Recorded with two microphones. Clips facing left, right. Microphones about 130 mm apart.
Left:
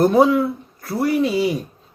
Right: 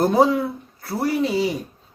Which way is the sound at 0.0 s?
35° right (ahead or behind).